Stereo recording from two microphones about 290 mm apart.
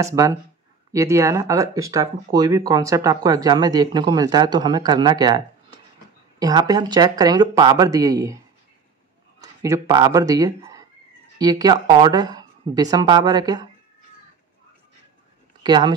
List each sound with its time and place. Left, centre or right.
0.0 s speech: centre
9.4 s speech: centre
15.6 s speech: centre